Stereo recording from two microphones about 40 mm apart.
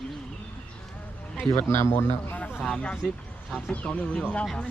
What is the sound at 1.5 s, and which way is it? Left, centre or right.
Speech, left.